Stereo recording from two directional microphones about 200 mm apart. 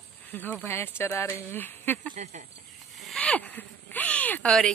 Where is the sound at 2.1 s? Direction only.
40° right (ahead or behind).